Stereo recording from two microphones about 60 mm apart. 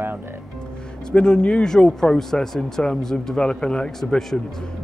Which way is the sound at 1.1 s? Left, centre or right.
Centre.